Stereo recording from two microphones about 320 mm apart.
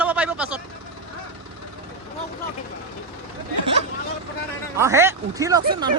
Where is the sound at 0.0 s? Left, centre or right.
Centre.